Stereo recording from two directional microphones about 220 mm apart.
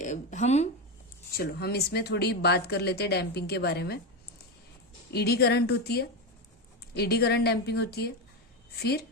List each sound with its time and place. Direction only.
0.0 s speech: 35° left (ahead or behind)
1.4 s speech: 45° left (ahead or behind)
5.1 s speech: 45° left (ahead or behind)